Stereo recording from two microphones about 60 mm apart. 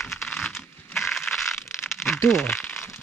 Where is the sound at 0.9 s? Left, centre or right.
Centre.